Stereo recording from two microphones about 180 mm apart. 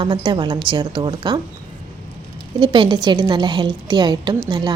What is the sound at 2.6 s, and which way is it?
A woman's voice, 25° right (ahead or behind).